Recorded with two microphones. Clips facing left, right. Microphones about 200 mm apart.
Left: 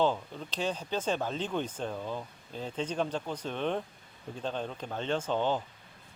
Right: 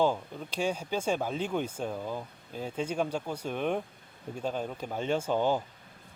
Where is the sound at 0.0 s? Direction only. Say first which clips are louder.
Right 1 dB; 10° right (ahead or behind).